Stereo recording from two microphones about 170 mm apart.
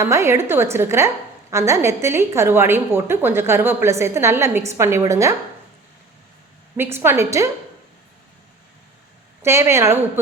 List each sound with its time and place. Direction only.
0.0 s a woman's voice: 15° right (ahead or behind)
6.7 s a woman's voice: 15° right (ahead or behind)
9.4 s a woman's voice: 15° right (ahead or behind)